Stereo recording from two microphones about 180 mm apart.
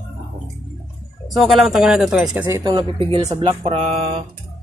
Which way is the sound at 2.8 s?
30° right (ahead or behind).